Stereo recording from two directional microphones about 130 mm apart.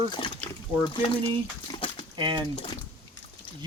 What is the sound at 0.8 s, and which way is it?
Speech, 40° left (ahead or behind).